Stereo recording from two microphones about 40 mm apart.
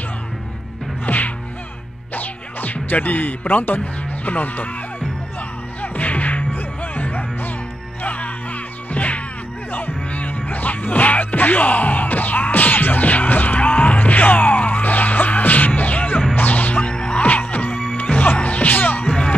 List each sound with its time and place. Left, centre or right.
1.0 s music: left
5.8 s music: left
16.9 s music: left
19.0 s music: left